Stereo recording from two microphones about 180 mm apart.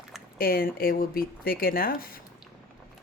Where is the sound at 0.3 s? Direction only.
55° left (ahead or behind).